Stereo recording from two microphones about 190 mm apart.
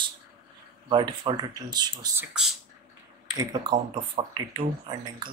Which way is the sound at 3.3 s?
20° right (ahead or behind).